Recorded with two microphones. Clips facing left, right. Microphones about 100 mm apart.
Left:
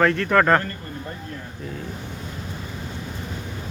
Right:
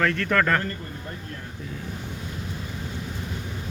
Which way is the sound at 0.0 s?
25° left (ahead or behind).